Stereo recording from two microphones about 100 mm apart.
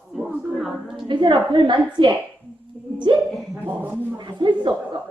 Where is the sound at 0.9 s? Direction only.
50° right (ahead or behind).